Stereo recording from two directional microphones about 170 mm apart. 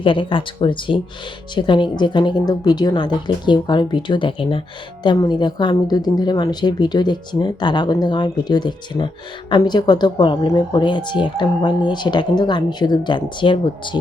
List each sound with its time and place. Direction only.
0.0 s speech: 30° left (ahead or behind)